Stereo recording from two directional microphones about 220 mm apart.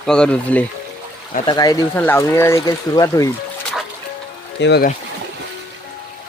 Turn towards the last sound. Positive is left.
turn(degrees=50)  # may be behind; listen again after turning